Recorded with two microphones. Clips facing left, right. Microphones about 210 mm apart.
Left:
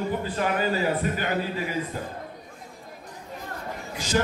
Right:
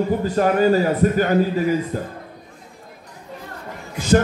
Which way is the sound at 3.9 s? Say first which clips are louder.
Right 8 dB; 55° right (ahead or behind).